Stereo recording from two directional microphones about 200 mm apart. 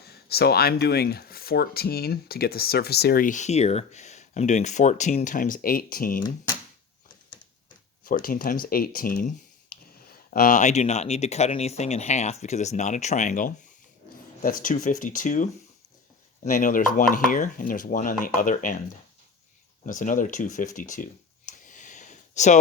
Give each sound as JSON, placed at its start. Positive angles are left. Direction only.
{"t": 0.0, "sound": "speech", "side_deg": 55}
{"t": 8.0, "sound": "speech", "side_deg": 45}
{"t": 19.8, "sound": "a sound", "side_deg": 40}